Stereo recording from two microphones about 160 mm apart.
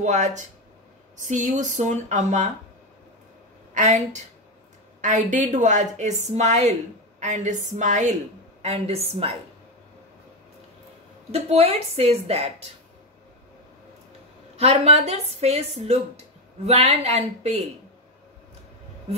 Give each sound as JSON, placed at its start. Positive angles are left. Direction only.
{"t": 0.0, "sound": "a woman's voice", "side_deg": -50}
{"t": 3.7, "sound": "a woman's voice", "side_deg": -50}
{"t": 11.3, "sound": "a woman's voice", "side_deg": -40}
{"t": 14.6, "sound": "a woman's voice", "side_deg": -40}